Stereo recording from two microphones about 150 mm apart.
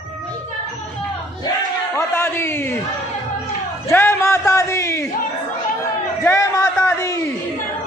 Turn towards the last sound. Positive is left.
turn(degrees=20)  # may be behind; listen again after turning